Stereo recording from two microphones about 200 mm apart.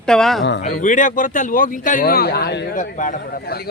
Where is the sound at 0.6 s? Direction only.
35° left (ahead or behind); by 2.7 s 55° left (ahead or behind).